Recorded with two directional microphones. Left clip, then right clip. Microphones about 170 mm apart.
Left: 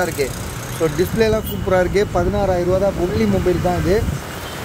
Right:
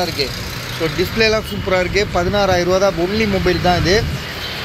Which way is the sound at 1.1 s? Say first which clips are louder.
Right 2 dB; 25° left (ahead or behind).